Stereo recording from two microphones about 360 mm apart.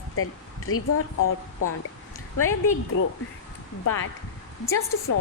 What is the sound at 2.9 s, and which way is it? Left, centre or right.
A woman's voice, left.